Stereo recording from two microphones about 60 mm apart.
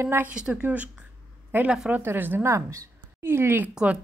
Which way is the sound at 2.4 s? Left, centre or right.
Right.